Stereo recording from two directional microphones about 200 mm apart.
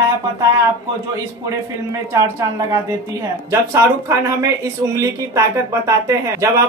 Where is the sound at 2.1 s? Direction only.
15° right (ahead or behind).